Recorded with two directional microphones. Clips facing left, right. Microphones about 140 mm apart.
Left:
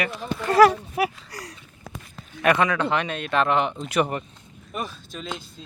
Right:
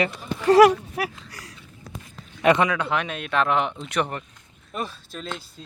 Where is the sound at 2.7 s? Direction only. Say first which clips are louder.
Left 2 dB; 5° right (ahead or behind).